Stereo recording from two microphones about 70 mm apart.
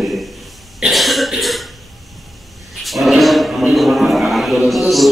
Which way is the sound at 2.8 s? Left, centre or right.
Centre.